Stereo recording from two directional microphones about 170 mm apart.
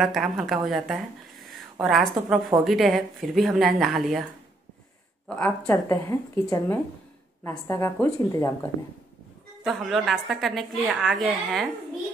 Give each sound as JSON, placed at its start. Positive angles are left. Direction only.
{"t": 0.0, "sound": "a woman's voice", "side_deg": 0}
{"t": 5.3, "sound": "speech", "side_deg": 5}
{"t": 9.6, "sound": "a woman's voice", "side_deg": 0}